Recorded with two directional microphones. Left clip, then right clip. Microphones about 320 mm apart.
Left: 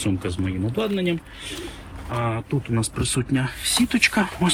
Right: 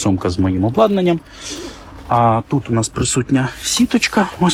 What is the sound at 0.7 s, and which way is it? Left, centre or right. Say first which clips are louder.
Speech: right 11 dB; centre.